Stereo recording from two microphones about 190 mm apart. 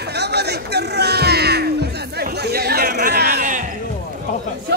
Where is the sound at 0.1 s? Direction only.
60° right (ahead or behind).